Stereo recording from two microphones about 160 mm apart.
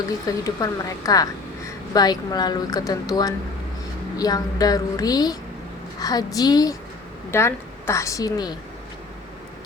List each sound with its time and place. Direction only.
0.3 s a woman's voice: 20° left (ahead or behind)